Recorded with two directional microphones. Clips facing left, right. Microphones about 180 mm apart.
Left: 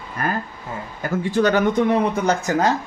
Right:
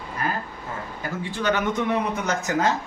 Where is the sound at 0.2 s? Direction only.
50° left (ahead or behind).